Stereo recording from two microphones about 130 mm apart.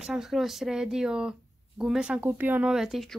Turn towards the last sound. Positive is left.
turn(degrees=0)  # may be behind; listen again after turning